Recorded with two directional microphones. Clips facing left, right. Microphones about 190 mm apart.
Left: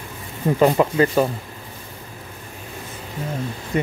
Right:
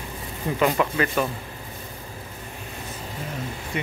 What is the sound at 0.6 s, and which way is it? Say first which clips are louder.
Speech: left 6 dB; 30° left (ahead or behind).